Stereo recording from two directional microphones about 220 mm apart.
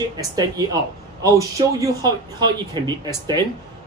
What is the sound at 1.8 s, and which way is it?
Speech, 15° right (ahead or behind).